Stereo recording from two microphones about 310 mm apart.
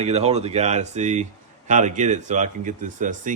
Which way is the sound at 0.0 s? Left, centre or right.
Right.